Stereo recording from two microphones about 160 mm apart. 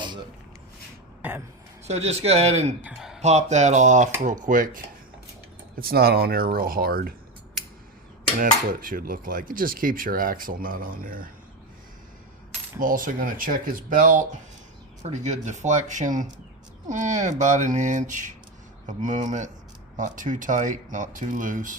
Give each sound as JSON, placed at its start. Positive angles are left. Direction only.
{"t": 1.9, "sound": "speech", "side_deg": -40}
{"t": 2.8, "sound": "speech", "side_deg": 0}
{"t": 3.2, "sound": "speech", "side_deg": -45}
{"t": 4.2, "sound": "cutlery", "side_deg": -55}
{"t": 5.8, "sound": "speech", "side_deg": -70}
{"t": 8.4, "sound": "cutlery", "side_deg": -60}
{"t": 12.8, "sound": "cutlery", "side_deg": -55}
{"t": 15.1, "sound": "speech", "side_deg": -45}
{"t": 20.0, "sound": "cutlery", "side_deg": -55}